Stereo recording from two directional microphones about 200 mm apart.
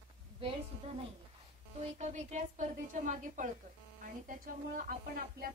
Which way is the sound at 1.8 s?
35° right (ahead or behind).